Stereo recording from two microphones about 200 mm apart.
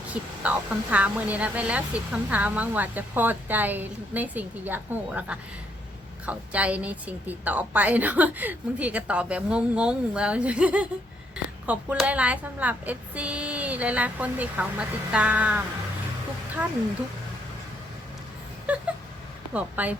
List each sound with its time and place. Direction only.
0.1 s a woman's voice: 5° right (ahead or behind)
18.7 s a sound: 5° right (ahead or behind)
19.5 s a woman's voice: 5° right (ahead or behind)